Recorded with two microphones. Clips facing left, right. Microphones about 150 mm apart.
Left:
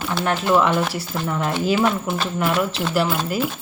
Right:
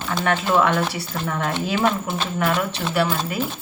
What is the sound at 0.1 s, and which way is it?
Speech, 5° left (ahead or behind).